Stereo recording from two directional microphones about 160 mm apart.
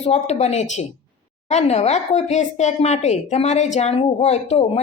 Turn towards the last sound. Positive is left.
turn(degrees=40)  # may be behind; listen again after turning